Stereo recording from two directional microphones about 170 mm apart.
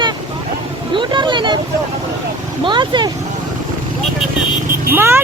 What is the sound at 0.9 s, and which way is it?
Vehicle, 25° right (ahead or behind).